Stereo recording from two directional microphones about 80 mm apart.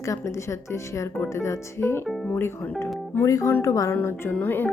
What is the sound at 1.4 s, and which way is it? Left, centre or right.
Speech, left.